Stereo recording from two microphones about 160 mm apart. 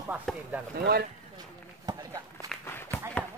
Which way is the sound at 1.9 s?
25° right (ahead or behind).